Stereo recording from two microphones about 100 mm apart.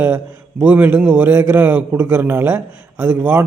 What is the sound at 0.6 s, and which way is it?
A man's voice, 15° right (ahead or behind).